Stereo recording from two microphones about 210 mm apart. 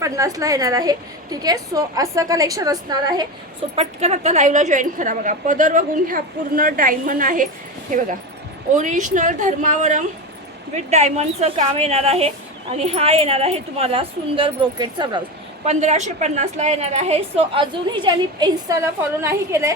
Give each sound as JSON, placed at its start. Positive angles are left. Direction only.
{"t": 0.0, "sound": "a woman's voice", "side_deg": -15}
{"t": 3.8, "sound": "a woman's voice", "side_deg": -30}
{"t": 8.7, "sound": "a woman's voice", "side_deg": -35}
{"t": 15.6, "sound": "a woman's voice", "side_deg": -35}